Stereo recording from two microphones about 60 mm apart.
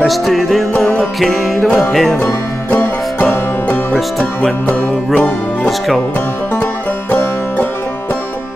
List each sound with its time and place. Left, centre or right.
0.0 s music: centre
2.7 s music: left